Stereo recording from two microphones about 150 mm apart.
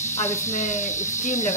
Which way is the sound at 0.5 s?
55° left (ahead or behind).